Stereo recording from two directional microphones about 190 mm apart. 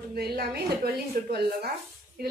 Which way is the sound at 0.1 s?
55° right (ahead or behind).